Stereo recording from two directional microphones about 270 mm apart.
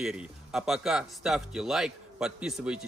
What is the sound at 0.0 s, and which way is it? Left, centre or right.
Speech, centre.